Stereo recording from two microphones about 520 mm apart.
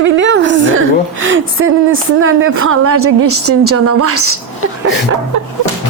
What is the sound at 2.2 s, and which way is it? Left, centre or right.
A woman's voice, right.